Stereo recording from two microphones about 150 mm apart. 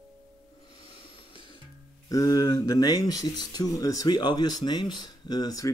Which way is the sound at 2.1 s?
25° left (ahead or behind).